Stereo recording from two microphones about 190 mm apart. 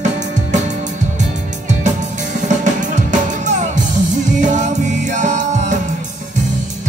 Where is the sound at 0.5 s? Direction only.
40° right (ahead or behind).